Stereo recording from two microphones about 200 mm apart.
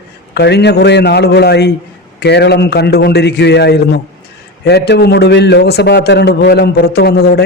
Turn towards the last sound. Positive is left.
turn(degrees=55)  # may be behind; listen again after turning